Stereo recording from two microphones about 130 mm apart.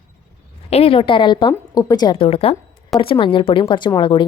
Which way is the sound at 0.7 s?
50° left (ahead or behind).